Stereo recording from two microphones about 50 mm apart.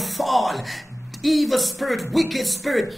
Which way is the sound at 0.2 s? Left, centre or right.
Centre.